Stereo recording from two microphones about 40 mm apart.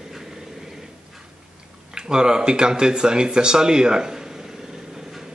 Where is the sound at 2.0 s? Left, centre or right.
Centre.